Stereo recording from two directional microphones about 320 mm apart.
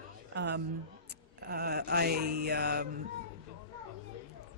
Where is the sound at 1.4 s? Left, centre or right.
Right.